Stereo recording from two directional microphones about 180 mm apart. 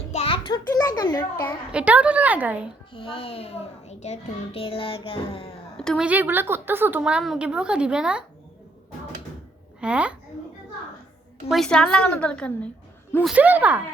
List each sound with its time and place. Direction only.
0.1 s a sound: 30° left (ahead or behind)
1.7 s a woman's voice: 10° right (ahead or behind)
2.9 s a child's voice: 30° left (ahead or behind)
5.7 s a woman's voice: 5° left (ahead or behind)
6.1 s a woman's voice: 10° right (ahead or behind)
9.8 s a woman's voice: 5° right (ahead or behind)
11.4 s a woman's voice: centre (ahead or behind)
13.2 s a woman's voice: 10° right (ahead or behind)